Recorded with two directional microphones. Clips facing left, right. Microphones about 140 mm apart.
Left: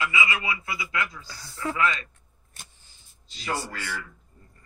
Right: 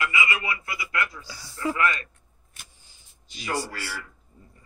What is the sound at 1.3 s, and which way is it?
Speech, 10° right (ahead or behind).